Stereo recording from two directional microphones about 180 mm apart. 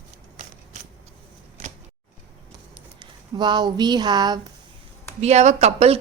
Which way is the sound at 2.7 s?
25° right (ahead or behind).